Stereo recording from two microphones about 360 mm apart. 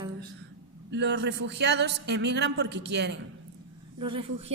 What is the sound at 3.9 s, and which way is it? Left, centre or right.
Speech, centre.